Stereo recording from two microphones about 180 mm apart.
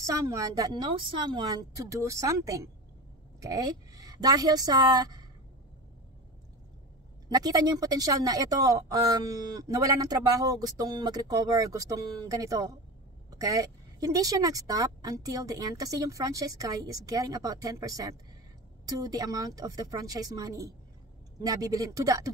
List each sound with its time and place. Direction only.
0.0 s a woman's voice: 15° right (ahead or behind)
7.2 s a woman's voice: 20° right (ahead or behind)